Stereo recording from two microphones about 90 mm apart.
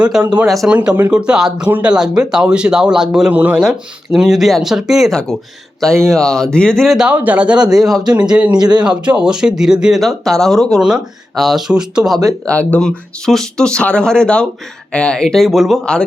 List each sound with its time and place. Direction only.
0.0 s speech: 15° right (ahead or behind)
0.4 s speech: centre (ahead or behind)
0.7 s speech: 15° right (ahead or behind)
3.3 s speech: 20° right (ahead or behind)
3.6 s speech: 5° right (ahead or behind)
6.9 s speech: 10° right (ahead or behind)
8.5 s speech: 50° right (ahead or behind)
8.8 s speech: 10° right (ahead or behind)
10.0 s speech: 5° left (ahead or behind)
12.5 s speech: 15° left (ahead or behind); by 15.8 s centre (ahead or behind)
15.8 s speech: 10° left (ahead or behind)